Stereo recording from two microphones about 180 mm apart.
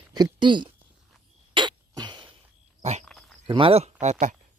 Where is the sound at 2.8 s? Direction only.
40° right (ahead or behind).